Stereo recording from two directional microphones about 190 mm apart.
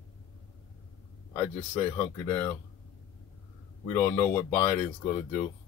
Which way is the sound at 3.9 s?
15° left (ahead or behind).